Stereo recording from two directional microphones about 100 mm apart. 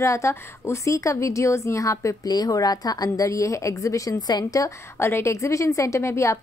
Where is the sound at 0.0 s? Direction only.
30° left (ahead or behind).